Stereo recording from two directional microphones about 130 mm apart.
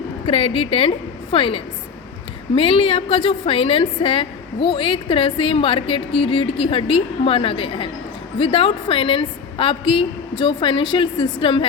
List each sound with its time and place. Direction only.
0.3 s a woman's voice: 45° left (ahead or behind)